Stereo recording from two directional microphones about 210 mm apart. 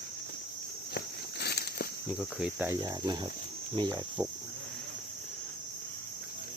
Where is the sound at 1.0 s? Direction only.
50° left (ahead or behind).